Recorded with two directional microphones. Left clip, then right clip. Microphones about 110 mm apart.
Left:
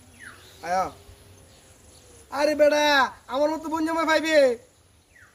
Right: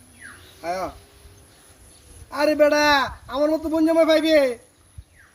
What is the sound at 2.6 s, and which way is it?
A man's voice, 20° left (ahead or behind).